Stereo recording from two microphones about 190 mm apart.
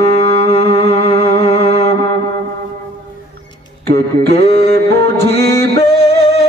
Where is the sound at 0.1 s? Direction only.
60° right (ahead or behind).